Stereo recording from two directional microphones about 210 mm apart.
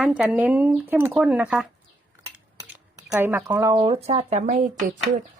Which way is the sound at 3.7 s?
25° right (ahead or behind).